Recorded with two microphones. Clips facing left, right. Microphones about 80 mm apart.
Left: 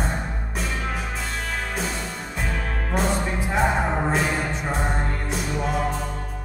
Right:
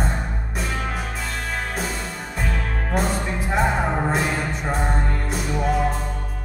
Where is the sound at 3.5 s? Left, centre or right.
Centre.